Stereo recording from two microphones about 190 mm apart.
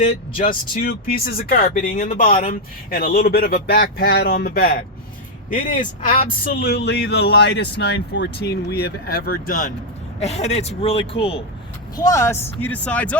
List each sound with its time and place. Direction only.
0.0 s speech: 45° left (ahead or behind)
6.1 s speech: 45° left (ahead or behind)
10.2 s speech: 35° left (ahead or behind)
11.9 s speech: 15° left (ahead or behind)